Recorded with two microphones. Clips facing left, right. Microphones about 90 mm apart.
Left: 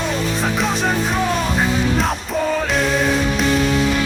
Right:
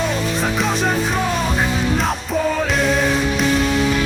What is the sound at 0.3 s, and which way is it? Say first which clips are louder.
Music: even; centre (ahead or behind).